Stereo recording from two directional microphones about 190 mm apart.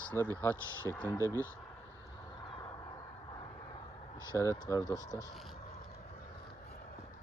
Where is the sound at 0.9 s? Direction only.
10° left (ahead or behind).